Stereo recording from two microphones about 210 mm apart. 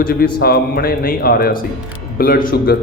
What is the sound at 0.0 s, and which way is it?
A man's voice, 45° left (ahead or behind).